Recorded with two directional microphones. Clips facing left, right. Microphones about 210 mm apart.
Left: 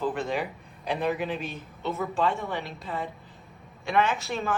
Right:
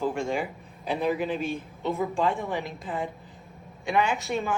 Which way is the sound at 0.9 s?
Centre (ahead or behind).